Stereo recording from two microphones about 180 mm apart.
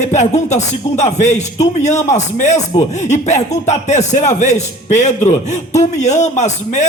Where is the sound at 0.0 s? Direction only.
40° left (ahead or behind).